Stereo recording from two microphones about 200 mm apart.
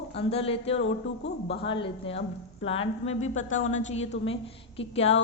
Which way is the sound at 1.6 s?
25° left (ahead or behind).